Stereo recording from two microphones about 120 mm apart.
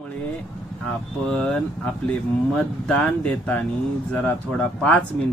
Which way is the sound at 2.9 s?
10° left (ahead or behind).